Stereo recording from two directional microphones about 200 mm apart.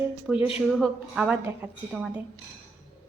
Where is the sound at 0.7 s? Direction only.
Centre (ahead or behind).